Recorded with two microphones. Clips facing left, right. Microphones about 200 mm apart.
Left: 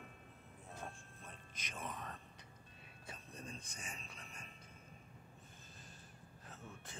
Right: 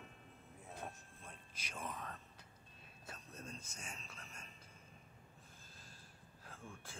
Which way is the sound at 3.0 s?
Centre (ahead or behind).